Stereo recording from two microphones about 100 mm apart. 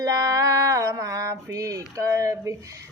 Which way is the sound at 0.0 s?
35° right (ahead or behind).